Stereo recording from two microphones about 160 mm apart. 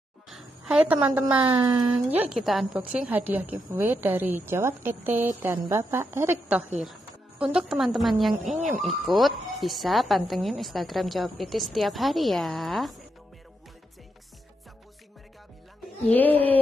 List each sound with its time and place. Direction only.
0.3 s a woman's voice: 5° right (ahead or behind)
1.4 s a sound: 30° right (ahead or behind)
2.0 s a woman's voice: 10° right (ahead or behind)
6.8 s a woman's voice: 5° right (ahead or behind)
16.1 s speech: 10° left (ahead or behind)